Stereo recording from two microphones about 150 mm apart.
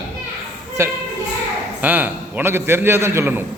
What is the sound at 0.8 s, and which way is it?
A man's voice, 15° right (ahead or behind).